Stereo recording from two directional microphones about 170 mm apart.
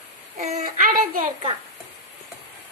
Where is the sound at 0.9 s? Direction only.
55° right (ahead or behind).